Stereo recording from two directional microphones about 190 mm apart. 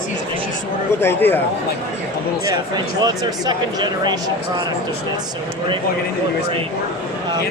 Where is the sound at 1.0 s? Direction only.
10° left (ahead or behind).